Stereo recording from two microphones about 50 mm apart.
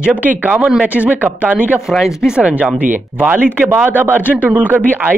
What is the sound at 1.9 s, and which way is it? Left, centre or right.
Speech, centre.